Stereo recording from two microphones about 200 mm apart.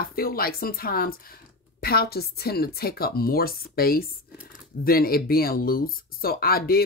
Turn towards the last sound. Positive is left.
turn(degrees=50)  # may be behind; listen again after turning